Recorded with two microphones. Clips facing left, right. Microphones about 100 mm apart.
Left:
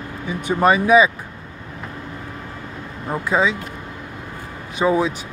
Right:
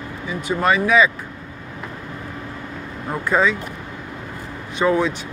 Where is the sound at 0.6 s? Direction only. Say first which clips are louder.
Left 3 dB; 20° left (ahead or behind).